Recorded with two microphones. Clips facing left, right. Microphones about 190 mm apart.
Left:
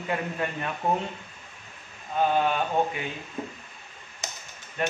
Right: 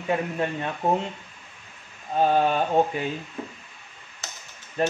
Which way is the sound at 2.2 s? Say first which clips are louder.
Right 3 dB; 40° right (ahead or behind).